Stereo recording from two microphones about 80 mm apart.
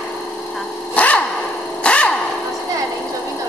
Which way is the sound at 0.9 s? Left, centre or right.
Centre.